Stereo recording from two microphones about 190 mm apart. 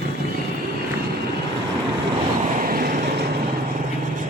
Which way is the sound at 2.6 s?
50° right (ahead or behind).